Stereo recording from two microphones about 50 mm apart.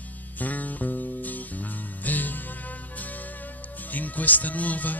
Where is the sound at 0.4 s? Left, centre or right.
Left.